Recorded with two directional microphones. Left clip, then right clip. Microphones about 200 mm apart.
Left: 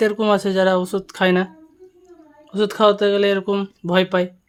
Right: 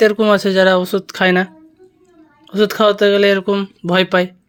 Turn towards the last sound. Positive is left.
turn(degrees=-15)  # may be behind; listen again after turning